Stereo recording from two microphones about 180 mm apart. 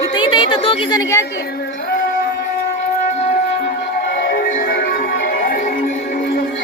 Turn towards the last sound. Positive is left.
turn(degrees=60)  # may be behind; listen again after turning